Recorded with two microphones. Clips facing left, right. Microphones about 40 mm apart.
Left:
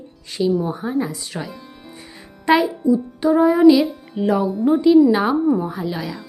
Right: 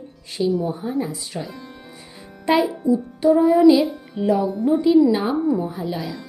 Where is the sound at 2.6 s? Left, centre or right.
Right.